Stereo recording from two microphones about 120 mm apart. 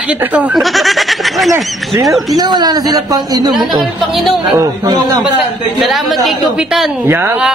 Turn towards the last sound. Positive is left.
turn(degrees=-20)  # may be behind; listen again after turning